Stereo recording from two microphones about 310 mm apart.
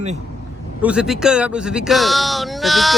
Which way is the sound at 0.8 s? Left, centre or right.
Centre.